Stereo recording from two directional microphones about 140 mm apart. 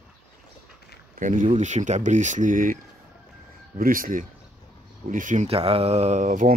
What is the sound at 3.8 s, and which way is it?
Speech, 85° right.